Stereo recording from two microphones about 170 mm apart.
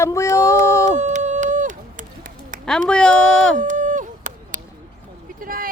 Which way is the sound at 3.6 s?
50° right (ahead or behind).